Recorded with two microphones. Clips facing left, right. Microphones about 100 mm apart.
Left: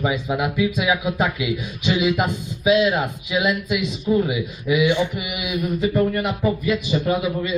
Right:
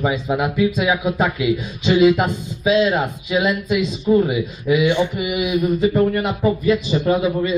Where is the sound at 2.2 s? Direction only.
10° left (ahead or behind).